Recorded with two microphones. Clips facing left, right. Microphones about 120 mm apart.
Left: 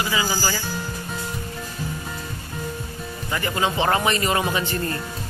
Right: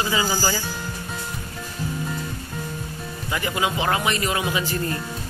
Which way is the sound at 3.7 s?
Centre (ahead or behind).